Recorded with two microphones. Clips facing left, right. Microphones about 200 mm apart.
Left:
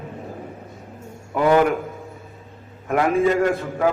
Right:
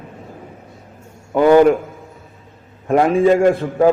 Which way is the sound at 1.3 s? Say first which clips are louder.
Right 6 dB; 30° right (ahead or behind).